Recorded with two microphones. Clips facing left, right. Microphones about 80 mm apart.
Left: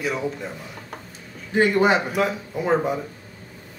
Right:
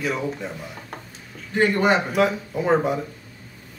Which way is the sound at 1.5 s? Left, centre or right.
Centre.